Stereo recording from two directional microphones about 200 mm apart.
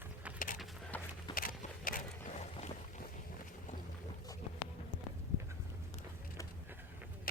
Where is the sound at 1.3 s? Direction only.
45° left (ahead or behind).